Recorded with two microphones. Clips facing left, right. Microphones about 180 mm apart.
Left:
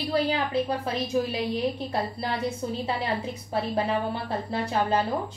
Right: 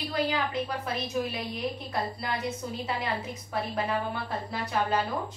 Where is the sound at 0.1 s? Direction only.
30° left (ahead or behind).